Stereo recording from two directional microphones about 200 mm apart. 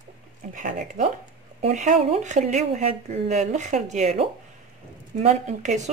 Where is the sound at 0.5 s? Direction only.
40° right (ahead or behind).